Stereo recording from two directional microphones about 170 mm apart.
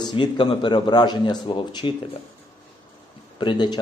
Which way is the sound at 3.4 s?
25° left (ahead or behind).